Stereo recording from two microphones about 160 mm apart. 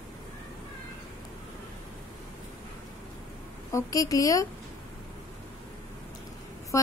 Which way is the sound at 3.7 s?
20° left (ahead or behind).